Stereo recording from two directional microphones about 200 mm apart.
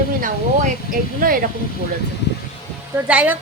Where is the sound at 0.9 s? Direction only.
45° right (ahead or behind).